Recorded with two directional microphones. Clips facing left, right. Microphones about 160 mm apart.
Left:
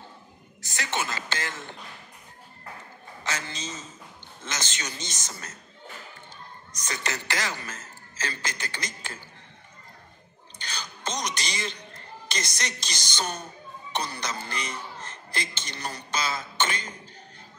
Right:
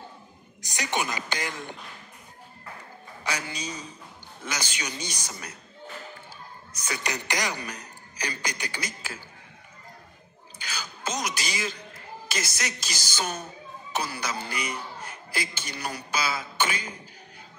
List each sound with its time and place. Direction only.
0.6 s a man's voice: 15° right (ahead or behind)
3.3 s a man's voice: 15° right (ahead or behind)
6.7 s a man's voice: 10° right (ahead or behind)
10.6 s a sound: 5° right (ahead or behind)
13.9 s a man's voice: 5° right (ahead or behind)